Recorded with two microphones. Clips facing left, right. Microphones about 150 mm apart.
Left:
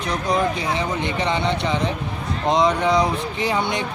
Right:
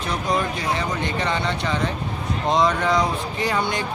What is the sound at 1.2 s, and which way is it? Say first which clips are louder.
Speech: left 4 dB; 20° left (ahead or behind).